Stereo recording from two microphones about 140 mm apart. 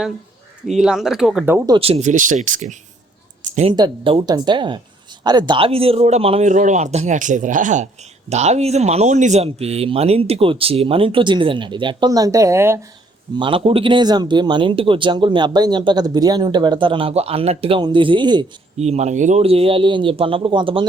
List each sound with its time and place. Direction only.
0.7 s speech: 5° right (ahead or behind)
1.8 s speech: 50° right (ahead or behind)
3.7 s speech: 35° right (ahead or behind)
6.5 s speech: 60° right (ahead or behind)
8.3 s speech: 55° right (ahead or behind); by 12.8 s 20° right (ahead or behind)
13.3 s speech: 35° right (ahead or behind)
18.8 s speech: 50° right (ahead or behind); by 20.8 s 35° right (ahead or behind)